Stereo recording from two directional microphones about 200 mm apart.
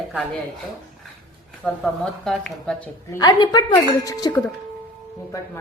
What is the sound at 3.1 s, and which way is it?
A woman's voice, 20° left (ahead or behind).